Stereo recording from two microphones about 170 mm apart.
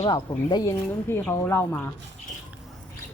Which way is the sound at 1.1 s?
15° left (ahead or behind).